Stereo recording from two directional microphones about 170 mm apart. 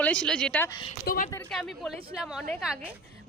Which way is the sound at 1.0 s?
55° left (ahead or behind).